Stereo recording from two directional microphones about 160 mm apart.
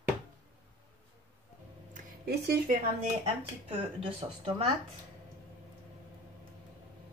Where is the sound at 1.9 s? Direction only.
70° right (ahead or behind).